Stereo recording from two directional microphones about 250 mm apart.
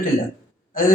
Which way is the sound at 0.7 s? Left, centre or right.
Left.